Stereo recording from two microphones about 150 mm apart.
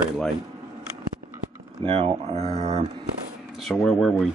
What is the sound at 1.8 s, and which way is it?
Speech, 35° right (ahead or behind).